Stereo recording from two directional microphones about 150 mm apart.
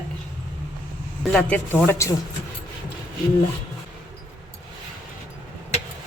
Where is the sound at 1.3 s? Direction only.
10° left (ahead or behind).